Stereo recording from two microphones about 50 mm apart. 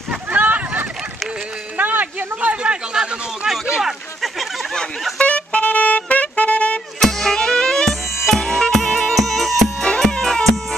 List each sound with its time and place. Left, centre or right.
0.3 s a sound: right
1.8 s speech: right; by 3.5 s centre
3.6 s a sound: centre
5.2 s music: left
7.0 s music: centre
7.9 s music: centre
8.4 s music: centre